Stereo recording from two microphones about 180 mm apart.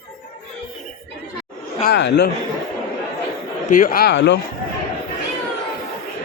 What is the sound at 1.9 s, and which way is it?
Speech, 70° left (ahead or behind).